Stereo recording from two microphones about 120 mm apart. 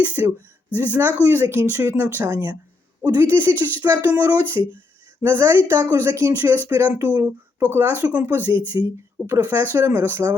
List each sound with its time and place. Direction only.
0.0 s speech: 15° right (ahead or behind)
8.7 s speech: 25° right (ahead or behind)